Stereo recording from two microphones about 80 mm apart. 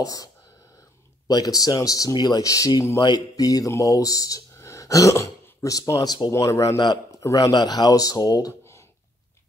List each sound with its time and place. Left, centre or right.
0.0 s a man's voice: left
7.5 s speech: left